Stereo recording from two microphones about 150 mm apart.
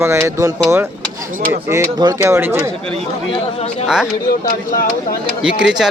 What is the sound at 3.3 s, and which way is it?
Speech, 40° left (ahead or behind).